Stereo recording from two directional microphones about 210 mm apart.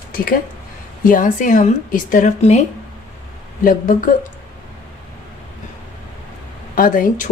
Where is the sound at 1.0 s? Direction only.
40° left (ahead or behind).